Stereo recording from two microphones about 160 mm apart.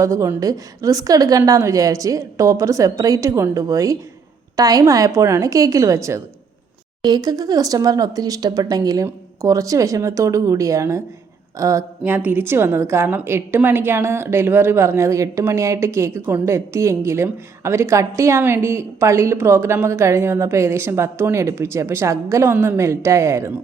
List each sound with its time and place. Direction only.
0.0 s a woman's voice: 20° right (ahead or behind)